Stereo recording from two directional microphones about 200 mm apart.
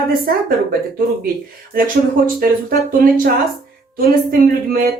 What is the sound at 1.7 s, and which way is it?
Speech, 45° right (ahead or behind).